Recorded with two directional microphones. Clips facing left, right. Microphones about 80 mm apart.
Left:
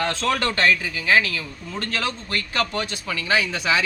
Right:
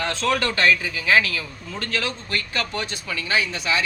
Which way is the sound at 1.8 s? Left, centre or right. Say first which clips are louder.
Even; left.